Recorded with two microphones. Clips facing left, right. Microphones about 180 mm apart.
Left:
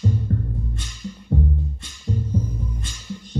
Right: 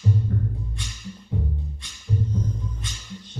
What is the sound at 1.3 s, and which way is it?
Music, 50° left (ahead or behind).